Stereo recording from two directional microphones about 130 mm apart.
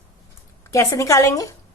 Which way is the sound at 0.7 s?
25° left (ahead or behind).